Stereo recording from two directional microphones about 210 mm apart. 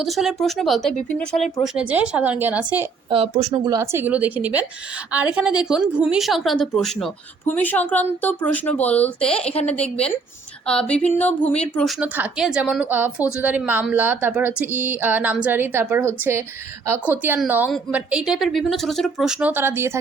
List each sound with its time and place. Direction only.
0.0 s a woman's voice: centre (ahead or behind)
3.1 s a woman's voice: 30° right (ahead or behind); by 11.9 s 5° left (ahead or behind)
11.9 s a woman's voice: 10° right (ahead or behind)